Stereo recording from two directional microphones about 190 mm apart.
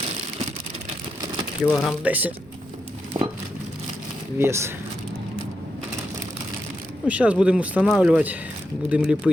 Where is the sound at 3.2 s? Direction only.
20° right (ahead or behind).